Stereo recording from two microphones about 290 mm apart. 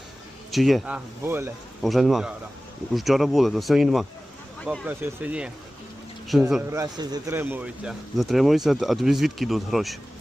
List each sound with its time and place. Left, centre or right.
0.5 s speech: centre